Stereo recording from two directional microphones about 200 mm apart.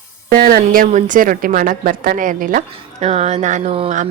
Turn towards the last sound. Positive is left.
turn(degrees=-35)  # may be behind; listen again after turning